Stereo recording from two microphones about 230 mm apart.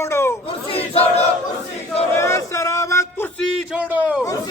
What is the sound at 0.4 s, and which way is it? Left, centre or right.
Crowd, left.